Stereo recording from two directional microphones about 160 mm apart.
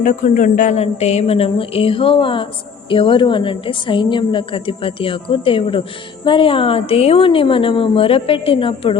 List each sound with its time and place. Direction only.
0.0 s a woman's voice: 55° left (ahead or behind); by 9.0 s 35° left (ahead or behind)